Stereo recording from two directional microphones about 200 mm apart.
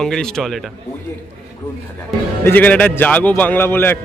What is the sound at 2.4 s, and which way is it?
A man's voice, 10° left (ahead or behind).